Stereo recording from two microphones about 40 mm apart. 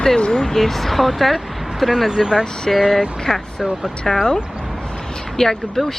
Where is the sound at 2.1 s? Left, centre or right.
Centre.